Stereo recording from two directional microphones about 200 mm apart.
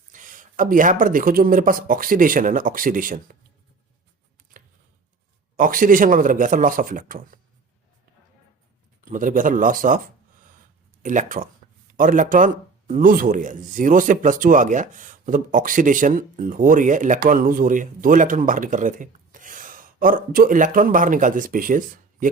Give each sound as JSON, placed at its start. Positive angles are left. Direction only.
{"t": 0.1, "sound": "speech", "side_deg": -40}
{"t": 4.5, "sound": "a sound", "side_deg": -45}
{"t": 5.5, "sound": "speech", "side_deg": -45}
{"t": 9.0, "sound": "speech", "side_deg": -40}
{"t": 11.0, "sound": "speech", "side_deg": -40}